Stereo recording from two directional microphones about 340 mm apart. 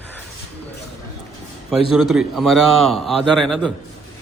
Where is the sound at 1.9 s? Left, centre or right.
Centre.